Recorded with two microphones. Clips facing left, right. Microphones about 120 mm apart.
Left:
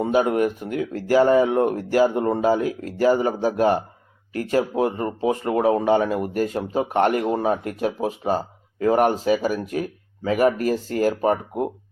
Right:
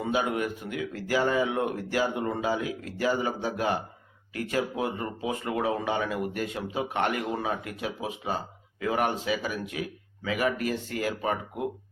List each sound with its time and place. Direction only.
0.0 s speech: 40° left (ahead or behind)